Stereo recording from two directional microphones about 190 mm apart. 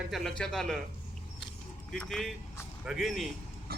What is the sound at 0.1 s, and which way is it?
Speech, centre (ahead or behind).